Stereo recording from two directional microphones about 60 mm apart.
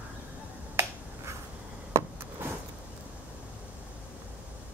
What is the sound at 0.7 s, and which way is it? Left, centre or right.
Finger snapping, right.